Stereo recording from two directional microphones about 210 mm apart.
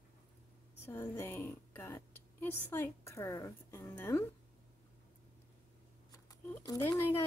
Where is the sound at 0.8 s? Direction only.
10° left (ahead or behind).